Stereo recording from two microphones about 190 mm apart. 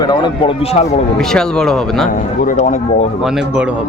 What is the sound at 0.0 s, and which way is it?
Speech, 25° left (ahead or behind).